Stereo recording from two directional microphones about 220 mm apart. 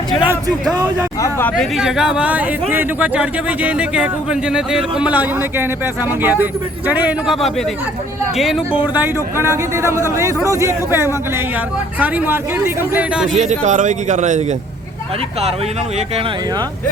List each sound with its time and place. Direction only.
1.2 s speech: 10° left (ahead or behind)
1.7 s a man's voice: 5° right (ahead or behind)
13.2 s a man's voice: 35° right (ahead or behind)
16.0 s speech: 25° right (ahead or behind)